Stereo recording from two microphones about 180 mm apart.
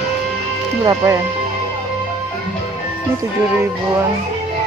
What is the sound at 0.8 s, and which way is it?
Speech, 15° right (ahead or behind).